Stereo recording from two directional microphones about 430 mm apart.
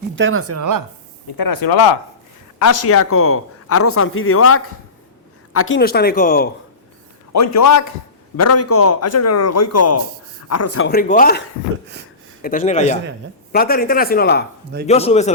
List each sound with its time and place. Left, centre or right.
0.2 s speech: right
1.4 s speech: left
2.6 s speech: left; by 6.5 s centre
7.3 s a man's voice: left; by 15.3 s centre